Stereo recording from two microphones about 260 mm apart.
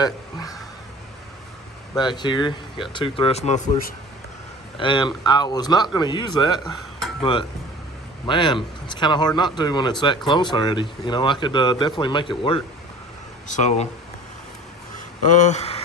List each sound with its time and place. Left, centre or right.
0.0 s a sound: centre
2.0 s speech: centre
15.3 s speech: left